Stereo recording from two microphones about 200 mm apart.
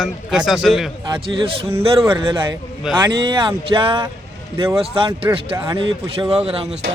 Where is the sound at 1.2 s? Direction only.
25° right (ahead or behind).